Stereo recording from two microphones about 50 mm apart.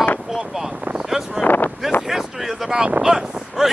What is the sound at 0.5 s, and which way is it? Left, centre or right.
Wind noise, centre.